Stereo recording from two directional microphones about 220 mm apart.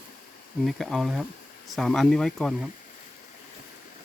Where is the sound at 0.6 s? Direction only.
Centre (ahead or behind).